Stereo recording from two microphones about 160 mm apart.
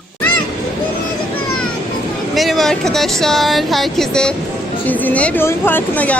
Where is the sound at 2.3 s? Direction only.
Centre (ahead or behind).